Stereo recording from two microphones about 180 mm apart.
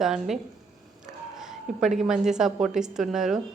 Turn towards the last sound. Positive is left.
turn(degrees=0)  # may be behind; listen again after turning